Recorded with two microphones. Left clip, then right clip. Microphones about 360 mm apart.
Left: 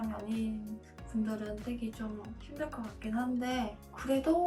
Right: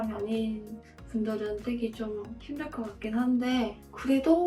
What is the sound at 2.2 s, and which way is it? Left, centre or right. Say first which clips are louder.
Speech: right 2 dB; centre.